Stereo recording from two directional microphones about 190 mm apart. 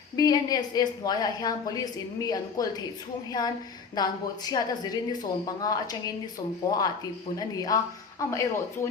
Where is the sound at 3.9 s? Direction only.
20° left (ahead or behind).